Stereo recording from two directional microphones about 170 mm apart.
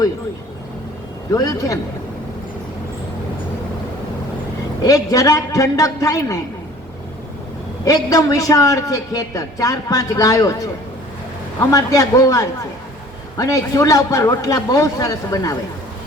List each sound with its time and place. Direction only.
1.3 s a man's voice: 20° left (ahead or behind)
4.8 s a man's voice: 20° left (ahead or behind)
7.9 s a man's voice: 20° left (ahead or behind)
11.6 s a man's voice: 20° left (ahead or behind)